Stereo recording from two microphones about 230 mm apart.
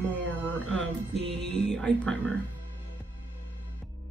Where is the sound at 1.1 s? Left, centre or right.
Right.